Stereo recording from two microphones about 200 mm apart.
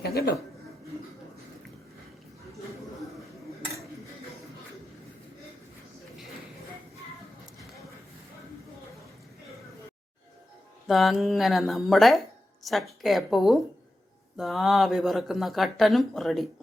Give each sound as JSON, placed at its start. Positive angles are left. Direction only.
{"t": 0.0, "sound": "a man's voice", "side_deg": 50}
{"t": 10.8, "sound": "speech", "side_deg": 0}